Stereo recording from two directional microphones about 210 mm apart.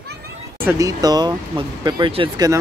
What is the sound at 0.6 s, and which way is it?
Speech, 15° right (ahead or behind).